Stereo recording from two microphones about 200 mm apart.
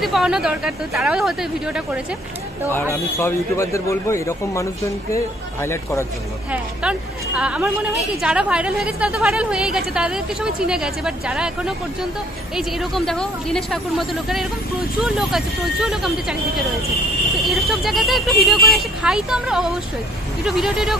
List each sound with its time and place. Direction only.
0.0 s a woman's voice: centre (ahead or behind)
2.7 s a man's voice: 10° left (ahead or behind)
6.5 s a woman's voice: 5° right (ahead or behind)
17.5 s a woman's voice: centre (ahead or behind)